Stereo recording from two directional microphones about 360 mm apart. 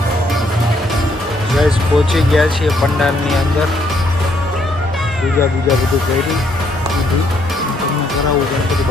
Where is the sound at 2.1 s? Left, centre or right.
Centre.